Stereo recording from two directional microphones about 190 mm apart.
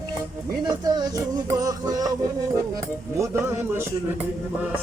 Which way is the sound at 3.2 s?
15° right (ahead or behind).